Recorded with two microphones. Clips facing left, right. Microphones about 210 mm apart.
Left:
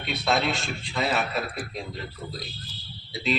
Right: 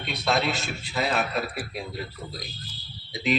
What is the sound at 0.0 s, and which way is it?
A man's voice, centre (ahead or behind).